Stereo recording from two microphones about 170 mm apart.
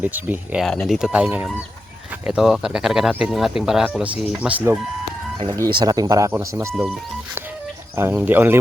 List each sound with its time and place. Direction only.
0.0 s speech: 10° right (ahead or behind)
0.6 s speech: centre (ahead or behind)
5.8 s speech: 20° right (ahead or behind)
7.9 s speech: 15° right (ahead or behind)